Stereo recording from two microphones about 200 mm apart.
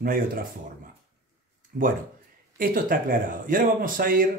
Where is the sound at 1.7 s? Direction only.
45° right (ahead or behind).